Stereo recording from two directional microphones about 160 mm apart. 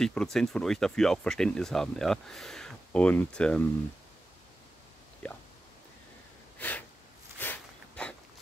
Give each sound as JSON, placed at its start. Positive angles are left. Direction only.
{"t": 0.0, "sound": "speech", "side_deg": 5}
{"t": 6.6, "sound": "a sound", "side_deg": 10}
{"t": 7.3, "sound": "walk", "side_deg": 10}